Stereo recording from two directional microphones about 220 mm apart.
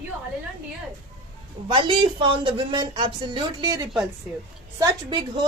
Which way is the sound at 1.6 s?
25° right (ahead or behind).